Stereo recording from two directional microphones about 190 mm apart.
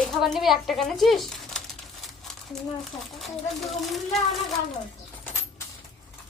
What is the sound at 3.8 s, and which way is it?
Speech, centre (ahead or behind).